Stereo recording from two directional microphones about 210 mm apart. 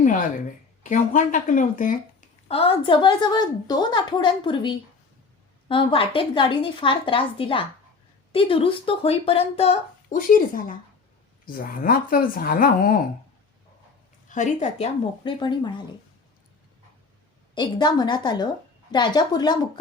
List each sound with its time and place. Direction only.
0.0 s a sound: 40° left (ahead or behind)
0.8 s speech: 35° left (ahead or behind)
14.3 s speech: 35° left (ahead or behind)
15.2 s speech: 20° left (ahead or behind)
17.5 s speech: 20° left (ahead or behind)